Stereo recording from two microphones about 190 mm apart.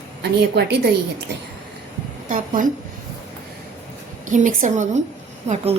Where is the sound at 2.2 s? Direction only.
45° right (ahead or behind).